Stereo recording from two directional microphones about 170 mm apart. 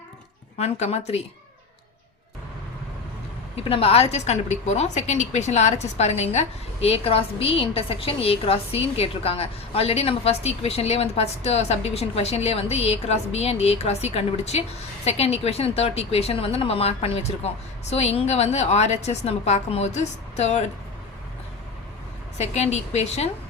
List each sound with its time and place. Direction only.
0.6 s a woman's voice: 40° left (ahead or behind)
3.6 s a woman's voice: 35° left (ahead or behind)
22.4 s a woman's voice: 40° left (ahead or behind)